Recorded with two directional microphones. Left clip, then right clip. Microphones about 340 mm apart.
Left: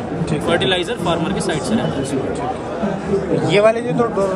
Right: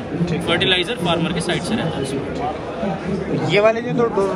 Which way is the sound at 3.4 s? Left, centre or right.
Centre.